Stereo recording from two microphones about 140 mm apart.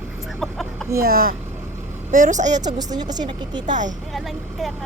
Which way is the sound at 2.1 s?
65° right (ahead or behind).